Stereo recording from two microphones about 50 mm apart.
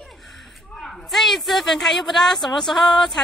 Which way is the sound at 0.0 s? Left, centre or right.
Centre.